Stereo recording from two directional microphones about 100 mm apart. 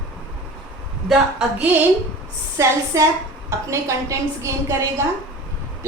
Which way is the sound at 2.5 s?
30° right (ahead or behind).